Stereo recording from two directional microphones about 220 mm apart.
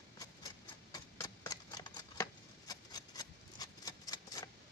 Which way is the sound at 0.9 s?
15° left (ahead or behind).